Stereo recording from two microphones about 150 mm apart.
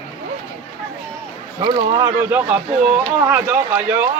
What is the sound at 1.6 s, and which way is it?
Speech, 30° right (ahead or behind).